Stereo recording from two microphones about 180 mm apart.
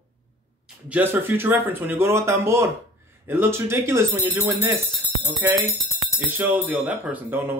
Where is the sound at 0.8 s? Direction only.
10° right (ahead or behind).